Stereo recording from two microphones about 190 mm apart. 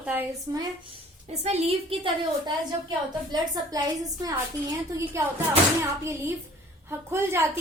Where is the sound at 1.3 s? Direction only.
35° right (ahead or behind).